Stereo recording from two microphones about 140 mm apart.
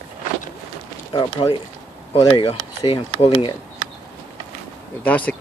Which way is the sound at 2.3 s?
40° left (ahead or behind).